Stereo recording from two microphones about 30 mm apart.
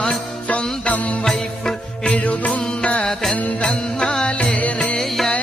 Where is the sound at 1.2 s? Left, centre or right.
Centre.